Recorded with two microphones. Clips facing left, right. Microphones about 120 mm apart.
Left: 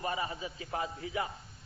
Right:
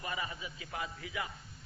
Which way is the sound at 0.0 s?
35° left (ahead or behind).